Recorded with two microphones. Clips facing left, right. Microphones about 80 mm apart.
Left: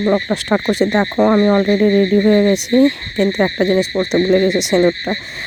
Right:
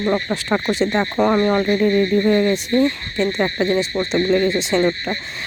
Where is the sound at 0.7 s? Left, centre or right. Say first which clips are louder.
Left 4 dB; left.